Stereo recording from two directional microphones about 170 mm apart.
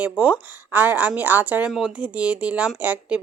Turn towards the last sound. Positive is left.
turn(degrees=-10)  # may be behind; listen again after turning